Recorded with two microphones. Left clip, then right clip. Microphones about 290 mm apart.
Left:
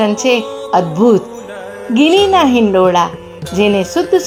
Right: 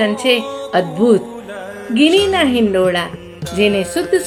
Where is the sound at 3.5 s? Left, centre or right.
Centre.